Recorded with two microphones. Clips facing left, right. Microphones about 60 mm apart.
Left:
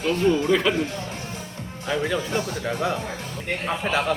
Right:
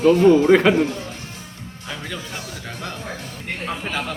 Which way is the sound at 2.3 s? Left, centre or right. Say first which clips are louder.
Left 7 dB; centre.